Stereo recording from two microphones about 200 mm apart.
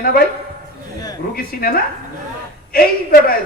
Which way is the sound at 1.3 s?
50° left (ahead or behind).